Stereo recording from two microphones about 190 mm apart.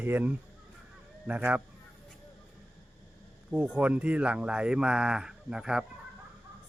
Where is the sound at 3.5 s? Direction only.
5° right (ahead or behind).